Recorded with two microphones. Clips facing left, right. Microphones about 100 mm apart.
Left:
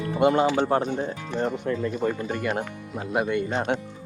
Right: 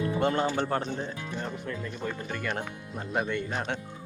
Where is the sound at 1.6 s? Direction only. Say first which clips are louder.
Left 9 dB; 30° left (ahead or behind).